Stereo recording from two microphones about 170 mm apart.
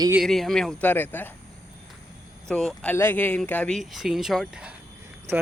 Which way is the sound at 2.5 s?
5° left (ahead or behind).